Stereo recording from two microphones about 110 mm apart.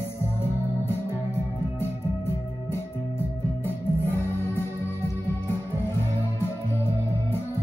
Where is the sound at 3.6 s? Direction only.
20° left (ahead or behind).